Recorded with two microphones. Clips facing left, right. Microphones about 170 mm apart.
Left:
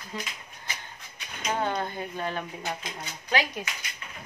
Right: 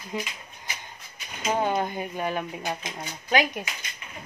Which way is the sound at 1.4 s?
10° right (ahead or behind).